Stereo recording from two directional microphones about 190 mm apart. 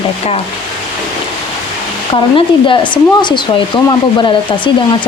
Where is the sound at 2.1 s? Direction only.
25° left (ahead or behind).